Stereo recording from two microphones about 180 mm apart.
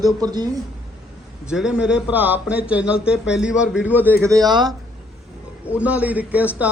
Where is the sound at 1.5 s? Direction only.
5° right (ahead or behind); by 4.6 s 20° right (ahead or behind).